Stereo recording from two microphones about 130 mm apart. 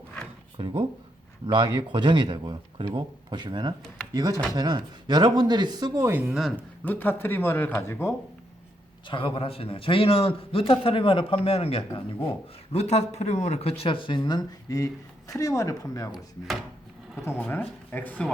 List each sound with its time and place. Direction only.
0.6 s speech: 35° right (ahead or behind); by 6.3 s 15° right (ahead or behind)
6.8 s speech: 15° left (ahead or behind)
9.0 s a man's voice: 40° left (ahead or behind)
17.4 s speech: 15° left (ahead or behind)